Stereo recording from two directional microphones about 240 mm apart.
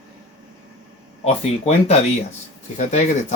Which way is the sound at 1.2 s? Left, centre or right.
Left.